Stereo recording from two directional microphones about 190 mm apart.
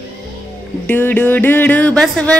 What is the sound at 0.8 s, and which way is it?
Music, 10° left (ahead or behind).